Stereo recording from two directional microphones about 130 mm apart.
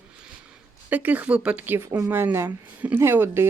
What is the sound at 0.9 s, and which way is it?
Speech, 15° right (ahead or behind).